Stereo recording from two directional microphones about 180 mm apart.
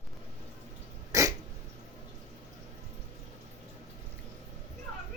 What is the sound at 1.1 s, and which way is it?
Dog, 15° right (ahead or behind).